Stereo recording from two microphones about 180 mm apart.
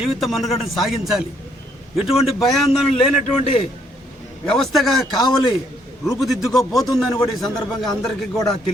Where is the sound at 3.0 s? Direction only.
30° left (ahead or behind).